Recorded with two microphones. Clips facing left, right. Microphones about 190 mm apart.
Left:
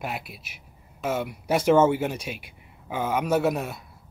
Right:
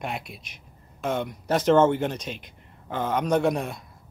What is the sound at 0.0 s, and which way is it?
Speech, 5° left (ahead or behind).